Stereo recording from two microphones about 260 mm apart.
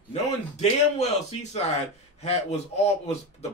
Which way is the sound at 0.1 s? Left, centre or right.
Left.